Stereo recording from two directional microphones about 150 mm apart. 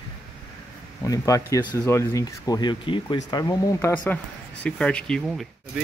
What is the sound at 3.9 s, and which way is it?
Speech, 10° left (ahead or behind).